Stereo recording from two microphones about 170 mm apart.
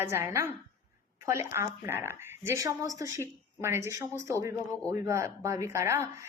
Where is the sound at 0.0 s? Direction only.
15° right (ahead or behind).